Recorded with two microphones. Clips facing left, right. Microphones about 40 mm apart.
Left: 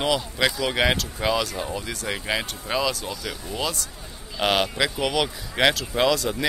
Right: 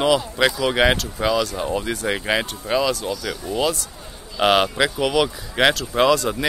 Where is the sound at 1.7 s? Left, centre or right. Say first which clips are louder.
Right 6 dB; right.